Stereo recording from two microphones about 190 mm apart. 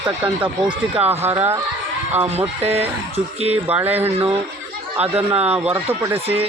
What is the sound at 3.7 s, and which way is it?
Speech, 10° right (ahead or behind).